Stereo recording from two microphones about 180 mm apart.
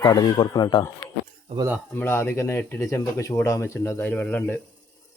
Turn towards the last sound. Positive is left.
turn(degrees=10)  # may be behind; listen again after turning